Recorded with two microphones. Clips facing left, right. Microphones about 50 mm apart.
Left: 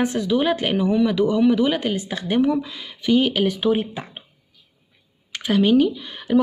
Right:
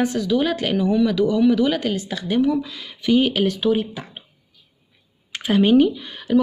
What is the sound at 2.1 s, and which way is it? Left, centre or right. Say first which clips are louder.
Speech: even; left.